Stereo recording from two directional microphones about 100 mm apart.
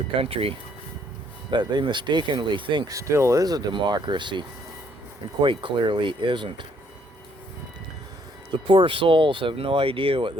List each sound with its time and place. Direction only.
0.2 s speech: 70° right (ahead or behind)
1.5 s speech: 50° right (ahead or behind)
2.8 s speech: 30° right (ahead or behind); by 6.7 s 55° right (ahead or behind)
8.6 s speech: 60° right (ahead or behind)